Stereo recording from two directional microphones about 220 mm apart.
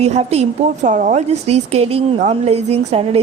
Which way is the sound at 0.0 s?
30° right (ahead or behind).